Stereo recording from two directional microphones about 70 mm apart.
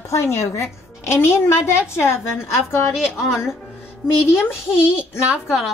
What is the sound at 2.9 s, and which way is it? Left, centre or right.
Speech, centre.